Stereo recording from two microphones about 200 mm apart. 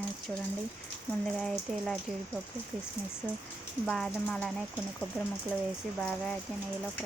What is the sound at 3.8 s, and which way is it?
Speech, 5° left (ahead or behind).